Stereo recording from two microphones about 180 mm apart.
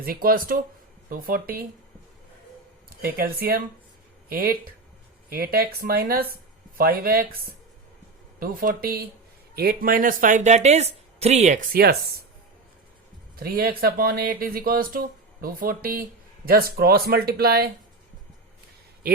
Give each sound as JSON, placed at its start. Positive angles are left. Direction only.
{"t": 0.0, "sound": "speech", "side_deg": -55}
{"t": 3.0, "sound": "speech", "side_deg": -55}
{"t": 13.3, "sound": "speech", "side_deg": -55}
{"t": 19.1, "sound": "speech", "side_deg": -60}